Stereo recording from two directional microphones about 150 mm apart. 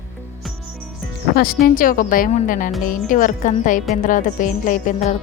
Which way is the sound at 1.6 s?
70° left (ahead or behind).